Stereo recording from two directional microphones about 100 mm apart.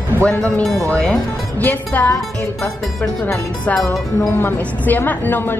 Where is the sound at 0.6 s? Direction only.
Centre (ahead or behind).